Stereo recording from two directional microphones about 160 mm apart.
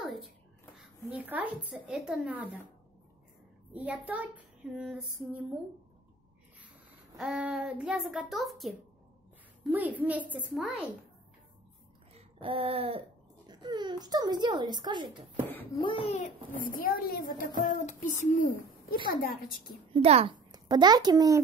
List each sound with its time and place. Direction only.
0.7 s a woman's voice: 10° right (ahead or behind)
3.7 s a woman's voice: 10° right (ahead or behind)
7.2 s a child's voice: centre (ahead or behind)
9.7 s a woman's voice: 10° right (ahead or behind)
12.1 s a sound: 35° right (ahead or behind)
13.5 s speech: 25° right (ahead or behind)
15.7 s a child's voice: 35° left (ahead or behind)
16.6 s a woman's voice: 60° left (ahead or behind)
17.7 s a child's voice: 50° left (ahead or behind)
19.0 s a woman's voice: 65° left (ahead or behind)
19.9 s a woman's voice: 35° right (ahead or behind)
20.5 s a child's voice: 25° right (ahead or behind)